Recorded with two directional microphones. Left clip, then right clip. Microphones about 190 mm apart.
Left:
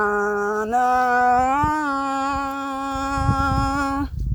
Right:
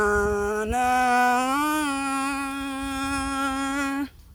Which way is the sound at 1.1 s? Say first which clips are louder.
Left 4 dB; 90° right.